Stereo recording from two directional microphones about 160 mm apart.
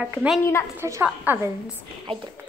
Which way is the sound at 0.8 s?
15° right (ahead or behind).